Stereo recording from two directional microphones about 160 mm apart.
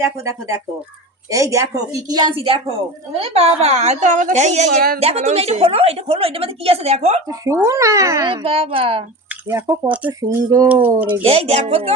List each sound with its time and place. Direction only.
0.0 s a woman's voice: 20° right (ahead or behind); by 7.2 s 40° right (ahead or behind)
7.3 s speech: 20° right (ahead or behind)
8.3 s a woman's voice: 35° right (ahead or behind)
9.5 s speech: 20° right (ahead or behind)
10.7 s speech: 10° right (ahead or behind)
11.2 s a woman's voice: 40° right (ahead or behind)